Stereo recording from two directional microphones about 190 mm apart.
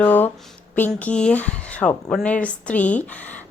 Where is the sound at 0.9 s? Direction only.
5° left (ahead or behind).